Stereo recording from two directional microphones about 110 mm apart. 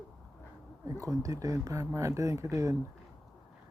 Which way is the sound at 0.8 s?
30° right (ahead or behind).